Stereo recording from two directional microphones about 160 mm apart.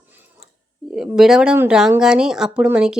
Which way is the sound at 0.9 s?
5° right (ahead or behind).